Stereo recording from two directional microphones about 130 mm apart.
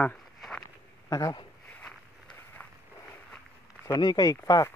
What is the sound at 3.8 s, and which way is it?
Speech, 30° left (ahead or behind).